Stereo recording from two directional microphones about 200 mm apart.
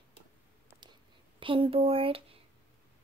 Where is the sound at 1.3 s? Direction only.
25° right (ahead or behind).